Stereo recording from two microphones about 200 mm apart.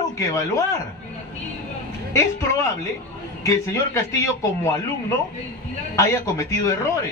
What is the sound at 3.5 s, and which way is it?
A man's voice, 15° left (ahead or behind).